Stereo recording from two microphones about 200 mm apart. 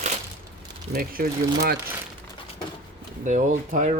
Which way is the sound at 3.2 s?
40° right (ahead or behind).